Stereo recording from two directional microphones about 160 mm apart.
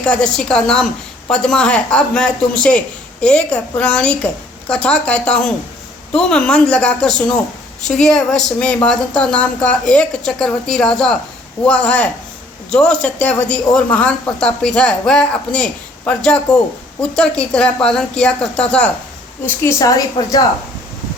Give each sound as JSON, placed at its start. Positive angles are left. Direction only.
{"t": 0.0, "sound": "speech", "side_deg": 5}
{"t": 19.5, "sound": "a woman's voice", "side_deg": 20}